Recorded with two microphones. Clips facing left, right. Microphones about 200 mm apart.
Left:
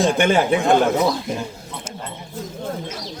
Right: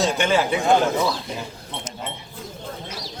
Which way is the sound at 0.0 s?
55° left (ahead or behind).